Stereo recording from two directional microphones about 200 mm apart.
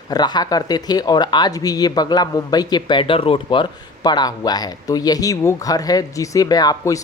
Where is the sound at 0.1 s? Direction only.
20° left (ahead or behind).